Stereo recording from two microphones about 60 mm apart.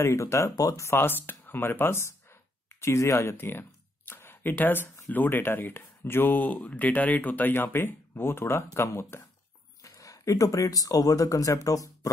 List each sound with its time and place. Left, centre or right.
0.0 s speech: left
0.8 s speech: left
9.8 s speech: left